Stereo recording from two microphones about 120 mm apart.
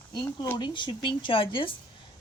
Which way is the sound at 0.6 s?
40° left (ahead or behind).